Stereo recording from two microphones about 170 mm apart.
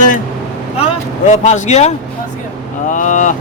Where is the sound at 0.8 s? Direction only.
40° left (ahead or behind).